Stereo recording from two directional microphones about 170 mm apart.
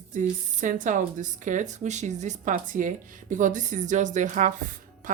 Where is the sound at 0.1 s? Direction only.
50° right (ahead or behind).